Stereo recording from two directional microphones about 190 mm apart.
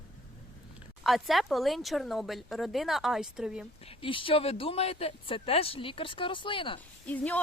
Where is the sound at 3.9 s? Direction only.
25° left (ahead or behind).